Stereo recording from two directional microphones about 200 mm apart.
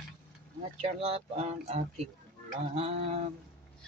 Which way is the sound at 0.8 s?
30° right (ahead or behind).